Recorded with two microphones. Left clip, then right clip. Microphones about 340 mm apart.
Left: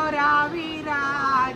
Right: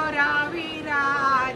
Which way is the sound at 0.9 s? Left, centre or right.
Left.